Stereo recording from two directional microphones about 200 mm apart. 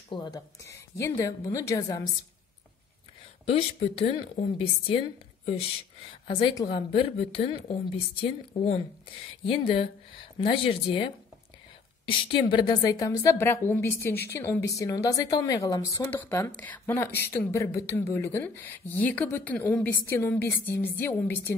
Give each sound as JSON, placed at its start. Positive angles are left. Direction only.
{"t": 0.1, "sound": "a woman's voice", "side_deg": 20}
{"t": 3.4, "sound": "a woman's voice", "side_deg": 30}
{"t": 9.5, "sound": "a woman's voice", "side_deg": 30}
{"t": 12.1, "sound": "a woman's voice", "side_deg": 25}